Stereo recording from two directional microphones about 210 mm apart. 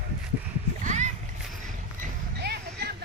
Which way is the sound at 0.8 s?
35° right (ahead or behind).